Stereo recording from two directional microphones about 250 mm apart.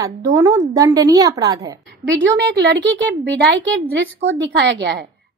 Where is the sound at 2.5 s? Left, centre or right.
Right.